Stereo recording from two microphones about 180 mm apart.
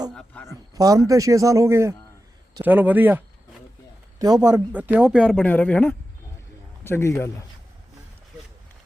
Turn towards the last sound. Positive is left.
turn(degrees=15)  # may be behind; listen again after turning